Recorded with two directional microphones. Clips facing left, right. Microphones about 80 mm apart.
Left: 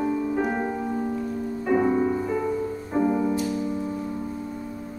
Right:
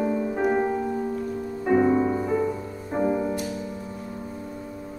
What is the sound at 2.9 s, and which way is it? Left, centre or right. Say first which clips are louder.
Music: left 2 dB; centre.